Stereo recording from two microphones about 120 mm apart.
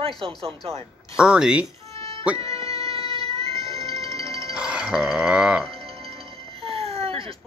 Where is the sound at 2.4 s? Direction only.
55° right (ahead or behind).